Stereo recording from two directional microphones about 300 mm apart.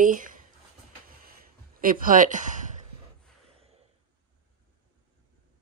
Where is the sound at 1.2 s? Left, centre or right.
Right.